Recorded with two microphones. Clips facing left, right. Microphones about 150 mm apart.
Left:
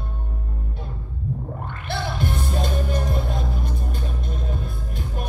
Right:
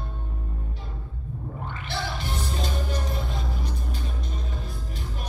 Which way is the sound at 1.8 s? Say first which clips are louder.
Left 6 dB; 50° left (ahead or behind).